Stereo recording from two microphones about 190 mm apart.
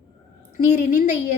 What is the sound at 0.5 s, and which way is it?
Speech, 40° left (ahead or behind).